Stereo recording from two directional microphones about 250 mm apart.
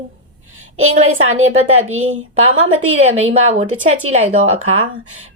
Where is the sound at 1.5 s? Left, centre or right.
Right.